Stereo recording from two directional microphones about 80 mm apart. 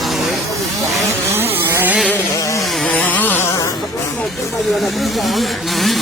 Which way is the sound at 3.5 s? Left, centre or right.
Left.